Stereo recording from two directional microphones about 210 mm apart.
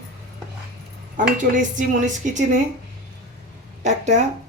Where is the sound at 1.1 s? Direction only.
40° right (ahead or behind).